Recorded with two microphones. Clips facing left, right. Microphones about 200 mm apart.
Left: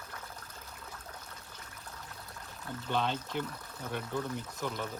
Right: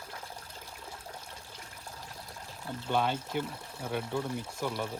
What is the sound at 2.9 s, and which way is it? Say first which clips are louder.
Speech: right 3 dB; 10° right (ahead or behind).